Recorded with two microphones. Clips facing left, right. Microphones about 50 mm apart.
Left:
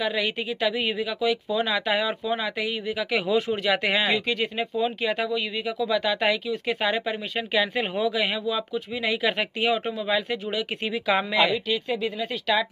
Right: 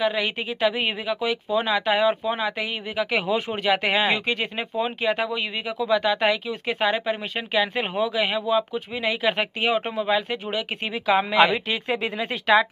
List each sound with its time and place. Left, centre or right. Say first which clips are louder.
0.0 s speech: right 2 dB; centre
11.5 s speech: right 1 dB; right